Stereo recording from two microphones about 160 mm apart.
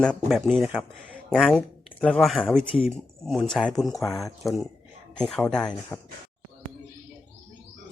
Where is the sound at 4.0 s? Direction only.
20° left (ahead or behind).